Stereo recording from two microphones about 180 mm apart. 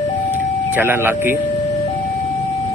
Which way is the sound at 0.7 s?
10° right (ahead or behind).